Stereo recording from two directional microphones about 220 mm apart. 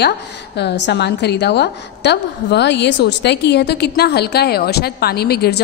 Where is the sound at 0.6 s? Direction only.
50° left (ahead or behind).